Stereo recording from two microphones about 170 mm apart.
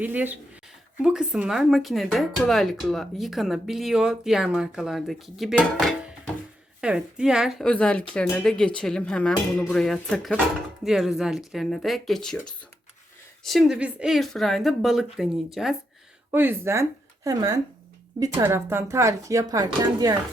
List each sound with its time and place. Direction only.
0.0 s speech: 10° right (ahead or behind)